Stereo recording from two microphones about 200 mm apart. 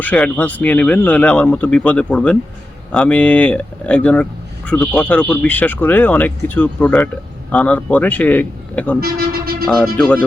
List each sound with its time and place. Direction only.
0.0 s speech: 5° left (ahead or behind)
9.0 s speech: 50° right (ahead or behind)
9.6 s speech: centre (ahead or behind)